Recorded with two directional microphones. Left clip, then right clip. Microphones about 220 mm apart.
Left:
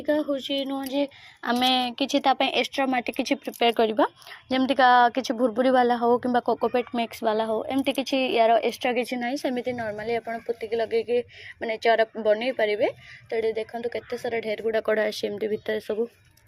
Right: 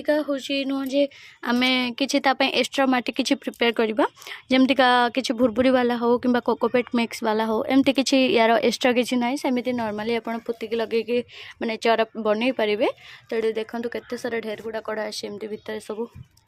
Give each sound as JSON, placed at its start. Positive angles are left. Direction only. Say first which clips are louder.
{"t": 0.0, "sound": "speech", "louder": "right 2 dB", "side_deg": -25}
{"t": 3.4, "sound": "speech", "louder": "left 3 dB", "side_deg": -50}
{"t": 6.0, "sound": "speech", "louder": "right 1 dB", "side_deg": -20}
{"t": 6.7, "sound": "speech", "louder": "right 3 dB", "side_deg": -55}
{"t": 7.1, "sound": "speech", "louder": "right 1 dB", "side_deg": -25}
{"t": 9.2, "sound": "speech", "louder": "right 3 dB", "side_deg": -10}
{"t": 14.5, "sound": "speech", "louder": "left 5 dB", "side_deg": 10}